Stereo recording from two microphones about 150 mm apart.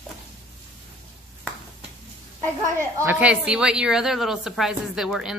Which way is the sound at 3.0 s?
10° right (ahead or behind).